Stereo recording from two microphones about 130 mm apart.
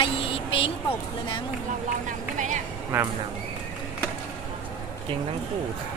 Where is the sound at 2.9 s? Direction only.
15° right (ahead or behind).